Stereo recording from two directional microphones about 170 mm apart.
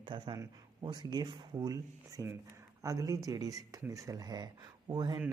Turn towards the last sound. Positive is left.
turn(degrees=-25)  # may be behind; listen again after turning